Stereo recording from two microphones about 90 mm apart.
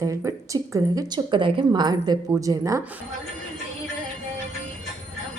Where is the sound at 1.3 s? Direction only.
65° right (ahead or behind).